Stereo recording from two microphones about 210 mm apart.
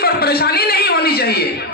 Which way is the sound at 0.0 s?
50° left (ahead or behind).